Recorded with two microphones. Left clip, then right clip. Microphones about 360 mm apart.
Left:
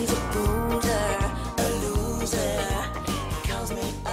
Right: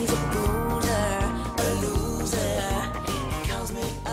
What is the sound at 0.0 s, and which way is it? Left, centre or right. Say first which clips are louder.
Music: even; centre.